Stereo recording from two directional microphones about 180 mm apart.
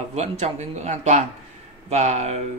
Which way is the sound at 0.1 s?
40° right (ahead or behind).